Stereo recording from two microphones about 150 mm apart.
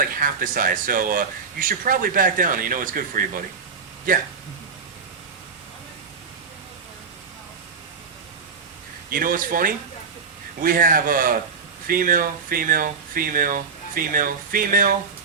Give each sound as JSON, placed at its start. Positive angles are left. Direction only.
{"t": 0.0, "sound": "speech", "side_deg": -70}
{"t": 9.0, "sound": "speech", "side_deg": -70}